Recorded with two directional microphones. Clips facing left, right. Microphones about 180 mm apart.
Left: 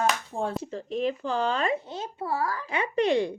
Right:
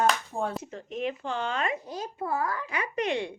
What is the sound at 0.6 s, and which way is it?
Speech, 35° left (ahead or behind).